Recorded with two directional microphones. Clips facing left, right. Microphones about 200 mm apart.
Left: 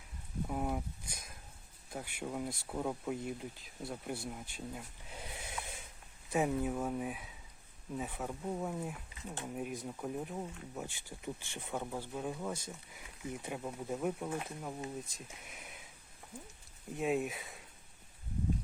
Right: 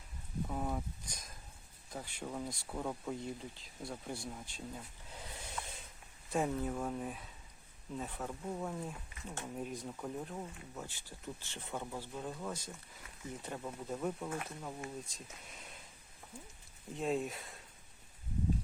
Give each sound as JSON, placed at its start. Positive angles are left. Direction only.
{"t": 0.4, "sound": "speech", "side_deg": 10}
{"t": 16.9, "sound": "speech", "side_deg": 10}